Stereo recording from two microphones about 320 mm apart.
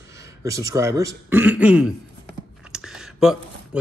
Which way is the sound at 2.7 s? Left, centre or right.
Centre.